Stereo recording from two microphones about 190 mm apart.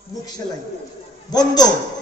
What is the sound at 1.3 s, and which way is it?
Speech, 20° left (ahead or behind).